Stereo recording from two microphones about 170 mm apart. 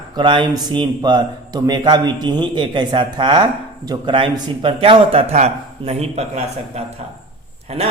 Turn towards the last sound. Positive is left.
turn(degrees=-35)  # may be behind; listen again after turning